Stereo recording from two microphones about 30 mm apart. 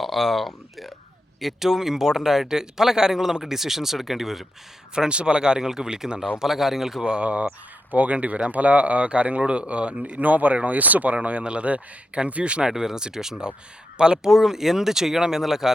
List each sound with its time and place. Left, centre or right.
0.0 s speech: centre
1.4 s speech: centre
4.9 s speech: right
6.4 s speech: centre
7.2 s speech: right
7.9 s speech: right
10.2 s speech: right
12.6 s speech: centre
13.4 s speech: right
14.2 s speech: centre